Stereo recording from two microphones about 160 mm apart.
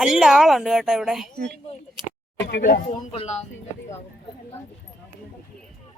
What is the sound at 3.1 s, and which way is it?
Speech, 40° left (ahead or behind).